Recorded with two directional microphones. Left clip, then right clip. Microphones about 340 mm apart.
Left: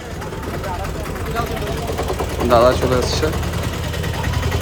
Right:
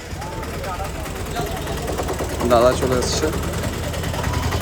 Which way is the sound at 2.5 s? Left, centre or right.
Centre.